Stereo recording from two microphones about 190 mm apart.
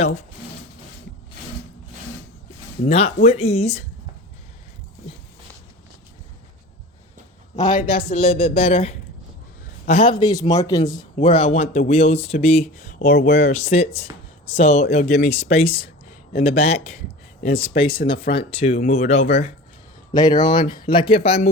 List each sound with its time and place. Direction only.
2.8 s a man's voice: 30° left (ahead or behind)
7.5 s a man's voice: 40° left (ahead or behind)
8.2 s a man's voice: 30° left (ahead or behind)
20.1 s speech: 20° left (ahead or behind)